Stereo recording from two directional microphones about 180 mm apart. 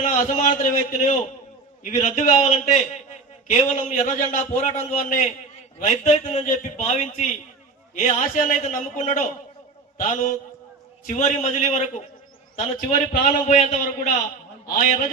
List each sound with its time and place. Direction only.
0.0 s a man's voice: 45° left (ahead or behind)
13.2 s a man's voice: 45° left (ahead or behind)